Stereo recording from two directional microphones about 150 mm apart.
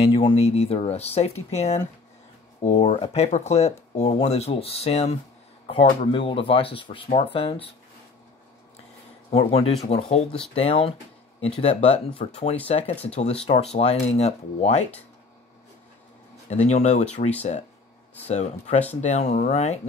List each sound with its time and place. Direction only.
0.0 s speech: 35° left (ahead or behind)
6.1 s speech: 35° left (ahead or behind)
9.3 s speech: 40° left (ahead or behind)
16.4 s speech: 50° left (ahead or behind)
18.3 s speech: 50° left (ahead or behind)